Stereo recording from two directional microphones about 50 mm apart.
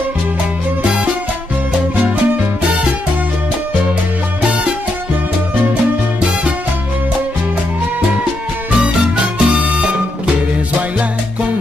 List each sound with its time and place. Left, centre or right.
8.8 s music: right